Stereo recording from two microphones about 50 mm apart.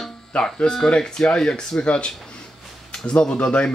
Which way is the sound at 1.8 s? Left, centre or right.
Left.